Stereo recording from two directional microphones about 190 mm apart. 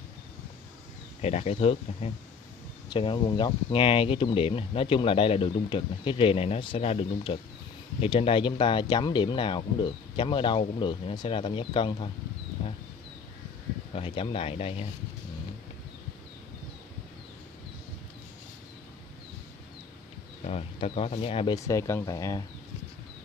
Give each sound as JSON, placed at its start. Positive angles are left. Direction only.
{"t": 1.2, "sound": "speech", "side_deg": 35}
{"t": 13.9, "sound": "speech", "side_deg": 30}
{"t": 20.4, "sound": "speech", "side_deg": 30}
{"t": 21.5, "sound": "speech", "side_deg": 15}